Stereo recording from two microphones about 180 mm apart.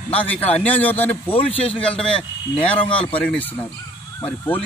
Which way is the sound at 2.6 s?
30° left (ahead or behind).